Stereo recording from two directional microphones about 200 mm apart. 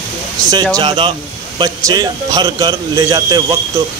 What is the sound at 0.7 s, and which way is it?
Speech, 25° right (ahead or behind).